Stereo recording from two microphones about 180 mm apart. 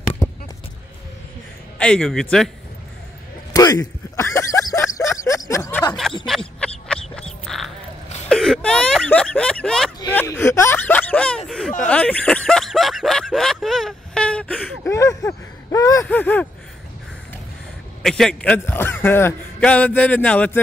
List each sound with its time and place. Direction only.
1.8 s a man's voice: 5° left (ahead or behind)
3.5 s a sound: 20° left (ahead or behind); by 7.7 s centre (ahead or behind)
8.3 s a man's voice: 5° left (ahead or behind)
18.0 s a man's voice: 5° left (ahead or behind)